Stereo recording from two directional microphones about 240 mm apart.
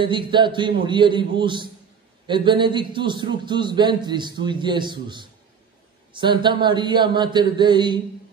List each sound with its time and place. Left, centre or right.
0.0 s a man's voice: centre